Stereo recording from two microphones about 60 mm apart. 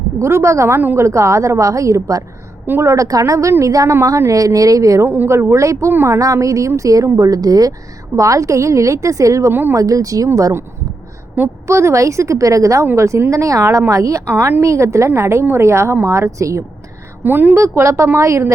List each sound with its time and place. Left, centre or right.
0.2 s a woman's voice: right
5.0 s a woman's voice: right
5.3 s a woman's voice: right
7.2 s speech: right
8.1 s a woman's voice: right
9.5 s a woman's voice: right
9.7 s speech: right
11.6 s a woman's voice: right
13.0 s a woman's voice: right
14.3 s a woman's voice: right
14.6 s a woman's voice: right
17.2 s a woman's voice: right
17.6 s a woman's voice: right